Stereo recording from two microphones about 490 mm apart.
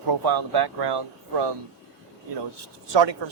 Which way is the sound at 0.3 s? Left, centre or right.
Right.